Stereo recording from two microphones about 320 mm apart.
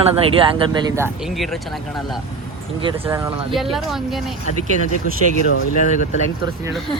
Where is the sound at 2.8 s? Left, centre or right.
Centre.